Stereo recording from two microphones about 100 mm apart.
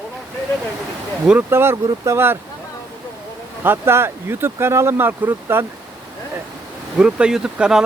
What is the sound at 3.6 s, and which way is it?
Speech, 25° right (ahead or behind).